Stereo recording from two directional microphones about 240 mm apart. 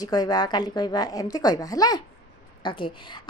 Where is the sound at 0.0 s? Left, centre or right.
Centre.